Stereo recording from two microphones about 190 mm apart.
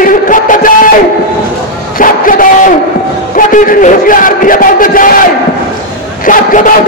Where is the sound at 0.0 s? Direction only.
45° left (ahead or behind).